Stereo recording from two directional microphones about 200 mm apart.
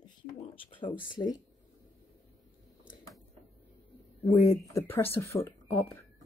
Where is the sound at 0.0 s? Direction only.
25° left (ahead or behind).